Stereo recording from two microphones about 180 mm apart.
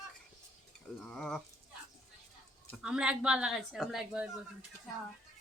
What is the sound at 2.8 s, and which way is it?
Speech, 5° right (ahead or behind).